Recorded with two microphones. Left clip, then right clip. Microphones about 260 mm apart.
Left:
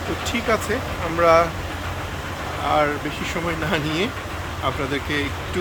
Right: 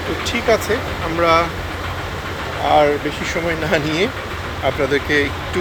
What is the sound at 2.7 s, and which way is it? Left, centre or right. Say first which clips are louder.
Speech: right 6 dB; centre.